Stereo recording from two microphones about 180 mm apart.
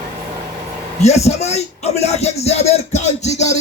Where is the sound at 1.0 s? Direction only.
35° left (ahead or behind).